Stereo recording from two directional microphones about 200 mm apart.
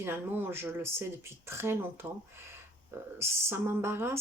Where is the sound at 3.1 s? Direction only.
15° right (ahead or behind).